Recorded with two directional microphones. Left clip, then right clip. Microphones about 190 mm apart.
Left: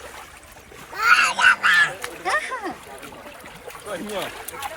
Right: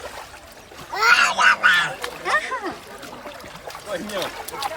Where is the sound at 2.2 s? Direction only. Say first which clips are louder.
Right 1 dB; 10° right (ahead or behind).